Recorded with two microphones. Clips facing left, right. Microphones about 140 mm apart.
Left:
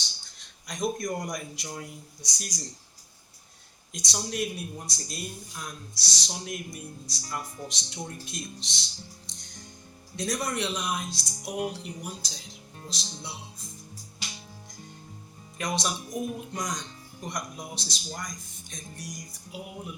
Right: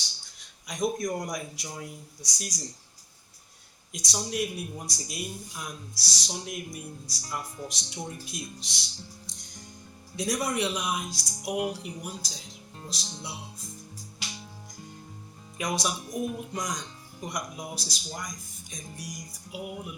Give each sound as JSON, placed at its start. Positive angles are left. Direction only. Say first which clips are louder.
{"t": 0.7, "sound": "speech", "louder": "right 1 dB", "side_deg": -5}
{"t": 4.1, "sound": "speech", "louder": "right 1 dB", "side_deg": -5}
{"t": 10.2, "sound": "speech", "louder": "right 2 dB", "side_deg": -10}
{"t": 15.5, "sound": "speech", "louder": "even", "side_deg": -5}